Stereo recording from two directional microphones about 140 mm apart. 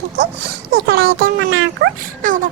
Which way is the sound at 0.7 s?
90° right.